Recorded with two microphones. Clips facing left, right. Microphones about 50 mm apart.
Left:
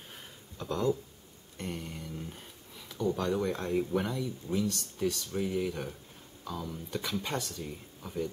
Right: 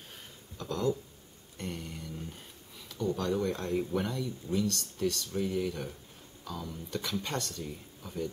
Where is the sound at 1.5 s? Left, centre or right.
Centre.